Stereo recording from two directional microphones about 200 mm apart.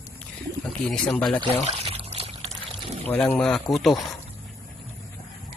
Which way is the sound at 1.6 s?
30° right (ahead or behind).